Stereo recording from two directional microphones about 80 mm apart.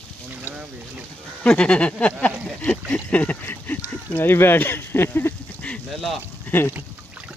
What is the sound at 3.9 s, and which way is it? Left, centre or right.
Speech, left.